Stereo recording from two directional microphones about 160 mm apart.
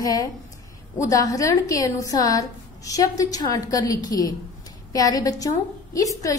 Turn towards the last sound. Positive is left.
turn(degrees=20)  # may be behind; listen again after turning